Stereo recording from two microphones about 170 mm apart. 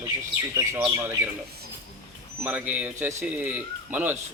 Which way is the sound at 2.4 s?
10° right (ahead or behind).